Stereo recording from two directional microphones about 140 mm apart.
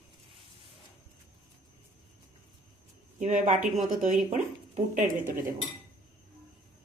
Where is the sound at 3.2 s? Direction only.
60° right (ahead or behind).